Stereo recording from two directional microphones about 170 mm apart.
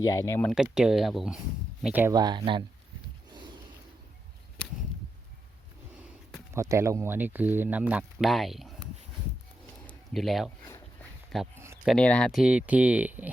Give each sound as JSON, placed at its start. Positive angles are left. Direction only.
{"t": 0.0, "sound": "speech", "side_deg": 15}
{"t": 0.5, "sound": "speech", "side_deg": -5}
{"t": 2.1, "sound": "speech", "side_deg": -25}
{"t": 6.5, "sound": "speech", "side_deg": -15}
{"t": 9.8, "sound": "a sound", "side_deg": 0}
{"t": 11.5, "sound": "a sound", "side_deg": -15}
{"t": 11.9, "sound": "speech", "side_deg": 5}